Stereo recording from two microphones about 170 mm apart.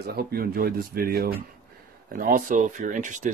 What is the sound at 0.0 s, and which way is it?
Speech, 65° right (ahead or behind).